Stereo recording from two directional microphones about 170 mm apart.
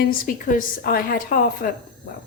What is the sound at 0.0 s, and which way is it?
A woman's voice, 50° left (ahead or behind).